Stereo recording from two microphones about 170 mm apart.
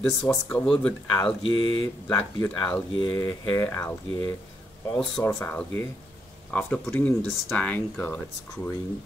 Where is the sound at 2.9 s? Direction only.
25° left (ahead or behind); by 8.7 s 10° left (ahead or behind).